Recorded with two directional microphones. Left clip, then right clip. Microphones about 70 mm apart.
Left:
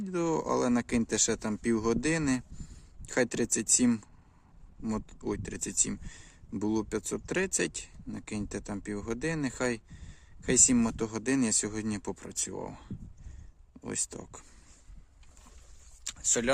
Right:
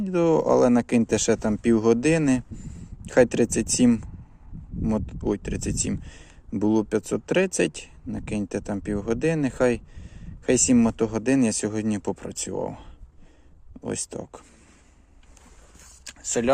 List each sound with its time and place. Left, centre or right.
0.0 s speech: right
3.8 s speech: right
4.9 s speech: right
10.8 s speech: right
13.8 s speech: right
16.0 s a sound: centre